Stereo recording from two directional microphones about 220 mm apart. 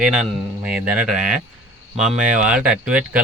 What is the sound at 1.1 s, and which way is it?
A man's voice, 35° right (ahead or behind).